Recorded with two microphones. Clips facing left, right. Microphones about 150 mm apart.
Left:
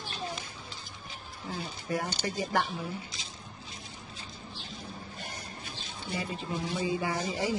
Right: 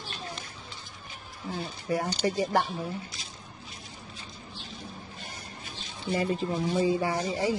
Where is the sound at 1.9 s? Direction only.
30° right (ahead or behind).